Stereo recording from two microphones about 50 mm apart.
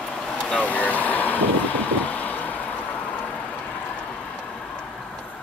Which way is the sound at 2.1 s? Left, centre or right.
Left.